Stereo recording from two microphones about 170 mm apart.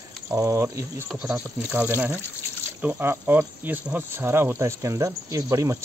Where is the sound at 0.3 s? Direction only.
15° right (ahead or behind).